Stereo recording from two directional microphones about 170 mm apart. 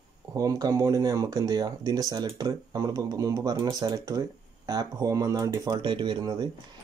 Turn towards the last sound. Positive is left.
turn(degrees=-25)  # may be behind; listen again after turning